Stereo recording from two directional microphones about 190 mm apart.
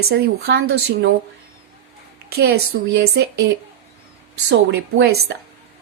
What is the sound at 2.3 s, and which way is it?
Speech, 55° right (ahead or behind).